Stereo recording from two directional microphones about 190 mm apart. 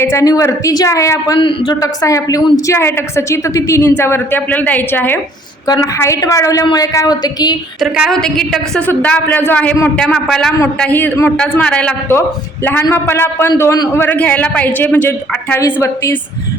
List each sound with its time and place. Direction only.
0.0 s speech: 15° left (ahead or behind)
7.8 s a woman's voice: 5° right (ahead or behind); by 16.1 s 15° left (ahead or behind)